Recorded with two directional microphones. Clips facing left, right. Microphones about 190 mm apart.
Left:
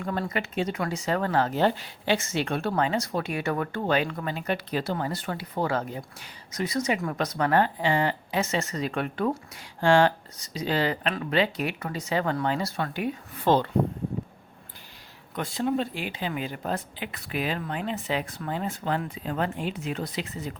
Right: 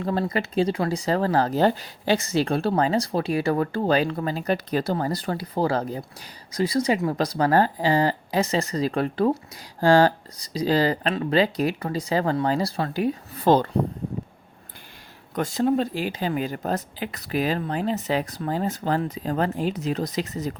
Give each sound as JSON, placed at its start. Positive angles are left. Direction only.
{"t": 0.0, "sound": "speech", "side_deg": -35}
{"t": 15.4, "sound": "speech", "side_deg": -45}